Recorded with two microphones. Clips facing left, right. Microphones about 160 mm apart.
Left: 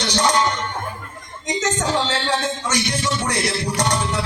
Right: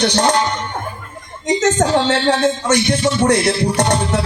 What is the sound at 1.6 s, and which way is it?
Music, 55° right (ahead or behind).